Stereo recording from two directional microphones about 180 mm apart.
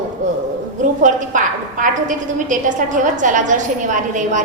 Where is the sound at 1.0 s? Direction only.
45° right (ahead or behind).